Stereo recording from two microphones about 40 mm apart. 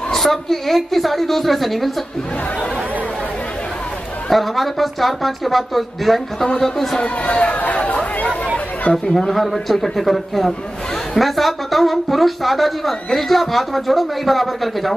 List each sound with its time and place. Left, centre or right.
0.1 s a woman's voice: centre
4.3 s a woman's voice: centre
7.0 s speech: left
7.5 s chatter: left
9.3 s a woman's voice: centre